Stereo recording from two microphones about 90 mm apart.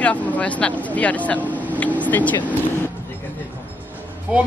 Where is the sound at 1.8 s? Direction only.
15° left (ahead or behind).